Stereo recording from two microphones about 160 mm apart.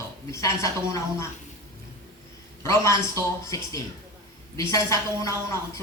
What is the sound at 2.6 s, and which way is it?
A man's voice, 20° left (ahead or behind).